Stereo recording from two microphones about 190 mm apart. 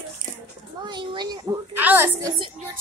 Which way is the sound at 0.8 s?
25° right (ahead or behind).